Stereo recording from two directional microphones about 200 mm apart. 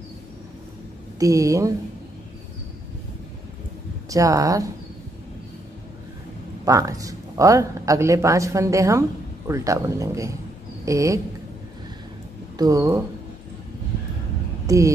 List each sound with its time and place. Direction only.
1.2 s speech: 15° right (ahead or behind)
4.1 s speech: 15° right (ahead or behind)
6.6 s speech: 15° right (ahead or behind)
12.5 s speech: 15° right (ahead or behind)
14.7 s speech: 15° right (ahead or behind)